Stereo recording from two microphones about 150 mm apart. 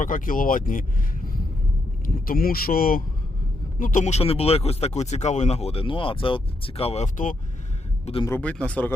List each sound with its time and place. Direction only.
0.0 s speech: 65° left (ahead or behind)
3.8 s speech: 60° left (ahead or behind)
8.4 s speech: 10° left (ahead or behind)